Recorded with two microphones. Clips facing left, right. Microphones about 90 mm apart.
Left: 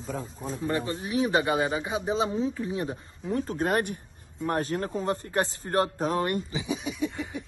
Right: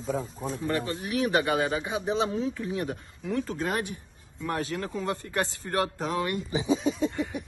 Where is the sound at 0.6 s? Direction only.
30° left (ahead or behind); by 4.0 s 50° left (ahead or behind).